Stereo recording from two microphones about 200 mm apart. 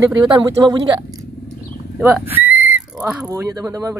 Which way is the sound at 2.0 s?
10° right (ahead or behind).